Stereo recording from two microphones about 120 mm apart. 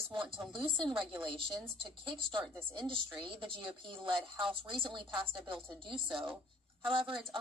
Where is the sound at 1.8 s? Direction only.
45° right (ahead or behind).